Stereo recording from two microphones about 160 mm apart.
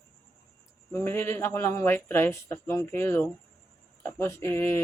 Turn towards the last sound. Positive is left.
turn(degrees=15)  # may be behind; listen again after turning